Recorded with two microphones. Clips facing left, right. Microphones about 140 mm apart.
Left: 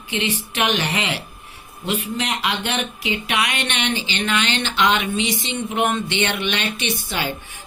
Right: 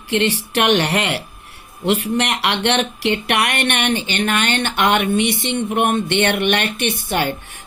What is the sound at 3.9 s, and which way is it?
Speech, 55° right (ahead or behind).